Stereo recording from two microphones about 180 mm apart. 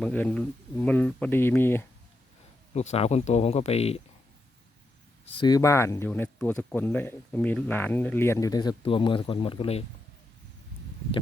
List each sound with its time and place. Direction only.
0.0 s speech: 10° left (ahead or behind)
2.7 s speech: 35° left (ahead or behind)
5.3 s speech: 25° left (ahead or behind)